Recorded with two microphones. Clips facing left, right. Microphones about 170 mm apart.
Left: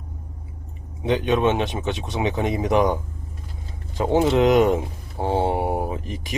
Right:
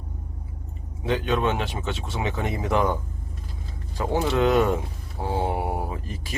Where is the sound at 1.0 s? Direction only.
20° left (ahead or behind).